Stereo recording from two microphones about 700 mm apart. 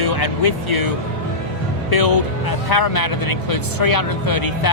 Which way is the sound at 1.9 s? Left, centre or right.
Left.